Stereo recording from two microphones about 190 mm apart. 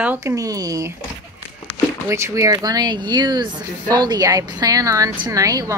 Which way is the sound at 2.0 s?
15° right (ahead or behind).